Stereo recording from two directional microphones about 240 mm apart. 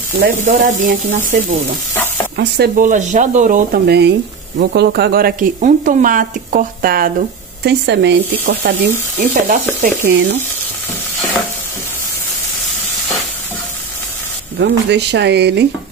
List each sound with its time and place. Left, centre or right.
0.2 s speech: right
9.2 s speech: right
14.6 s speech: right